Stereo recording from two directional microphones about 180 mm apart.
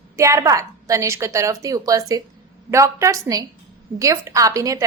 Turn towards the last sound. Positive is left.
turn(degrees=-20)  # may be behind; listen again after turning